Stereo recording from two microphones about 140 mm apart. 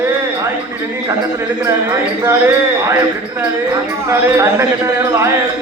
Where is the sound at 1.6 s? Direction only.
20° right (ahead or behind).